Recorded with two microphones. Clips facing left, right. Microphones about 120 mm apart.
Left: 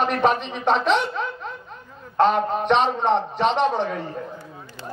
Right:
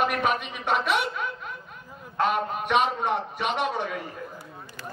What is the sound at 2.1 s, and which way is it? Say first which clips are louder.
Speech: left 7 dB; 30° left (ahead or behind).